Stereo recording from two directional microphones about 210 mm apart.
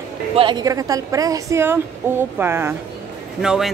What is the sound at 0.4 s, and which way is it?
A woman's voice, 20° right (ahead or behind).